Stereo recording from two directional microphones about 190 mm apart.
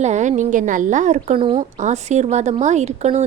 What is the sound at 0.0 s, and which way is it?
A woman's voice, 40° right (ahead or behind).